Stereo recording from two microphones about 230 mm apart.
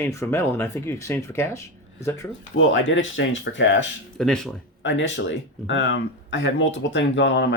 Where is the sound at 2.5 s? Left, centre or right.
Left.